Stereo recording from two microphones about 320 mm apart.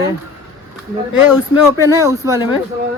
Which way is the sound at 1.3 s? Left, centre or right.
Centre.